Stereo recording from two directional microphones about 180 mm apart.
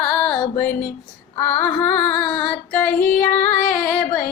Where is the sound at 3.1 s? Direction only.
50° left (ahead or behind).